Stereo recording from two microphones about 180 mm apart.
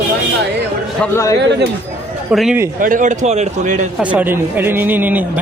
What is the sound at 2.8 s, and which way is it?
A man's voice, 50° right (ahead or behind).